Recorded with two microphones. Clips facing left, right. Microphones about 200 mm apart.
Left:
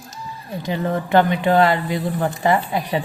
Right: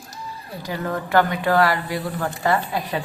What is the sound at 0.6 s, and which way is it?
Speech, 20° left (ahead or behind).